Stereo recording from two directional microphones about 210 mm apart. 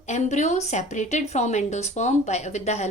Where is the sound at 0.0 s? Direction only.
35° left (ahead or behind).